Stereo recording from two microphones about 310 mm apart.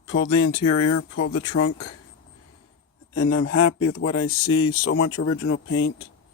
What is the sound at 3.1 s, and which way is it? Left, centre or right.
Speech, left.